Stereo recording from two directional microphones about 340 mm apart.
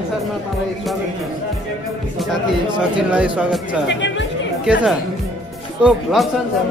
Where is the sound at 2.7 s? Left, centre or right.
Centre.